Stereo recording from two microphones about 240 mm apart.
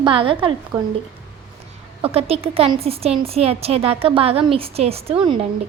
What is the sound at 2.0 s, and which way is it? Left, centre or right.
Speech, right.